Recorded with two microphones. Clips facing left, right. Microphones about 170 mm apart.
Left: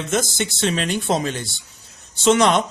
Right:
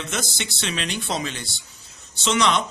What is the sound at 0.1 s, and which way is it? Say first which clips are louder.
Speech: left 8 dB; 45° left (ahead or behind).